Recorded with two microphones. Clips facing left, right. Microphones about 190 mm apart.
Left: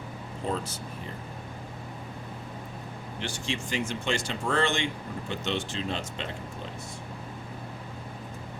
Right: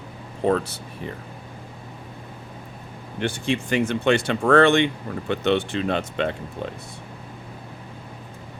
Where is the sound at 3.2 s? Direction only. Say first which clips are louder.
Right 10 dB; 55° right (ahead or behind).